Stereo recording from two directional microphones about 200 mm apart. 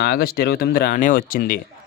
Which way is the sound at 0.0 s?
50° left (ahead or behind).